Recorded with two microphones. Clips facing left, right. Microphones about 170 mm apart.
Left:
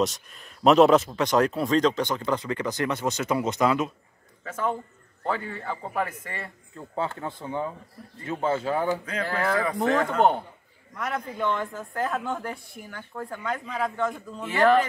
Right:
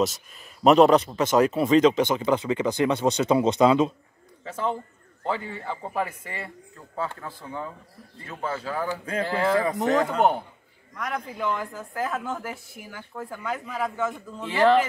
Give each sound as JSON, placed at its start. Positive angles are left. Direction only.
{"t": 0.7, "sound": "speech", "side_deg": 0}
{"t": 1.7, "sound": "a man's voice", "side_deg": -20}
{"t": 5.2, "sound": "a man's voice", "side_deg": -15}
{"t": 7.0, "sound": "speech", "side_deg": 25}
{"t": 9.2, "sound": "speech", "side_deg": -25}
{"t": 11.0, "sound": "speech", "side_deg": 0}
{"t": 14.4, "sound": "speech", "side_deg": -20}